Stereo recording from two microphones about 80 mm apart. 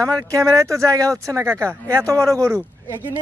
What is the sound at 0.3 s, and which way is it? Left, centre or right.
A man's voice, right.